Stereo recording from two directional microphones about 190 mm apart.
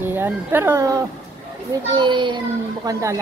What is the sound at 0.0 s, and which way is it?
A child's voice, 10° right (ahead or behind).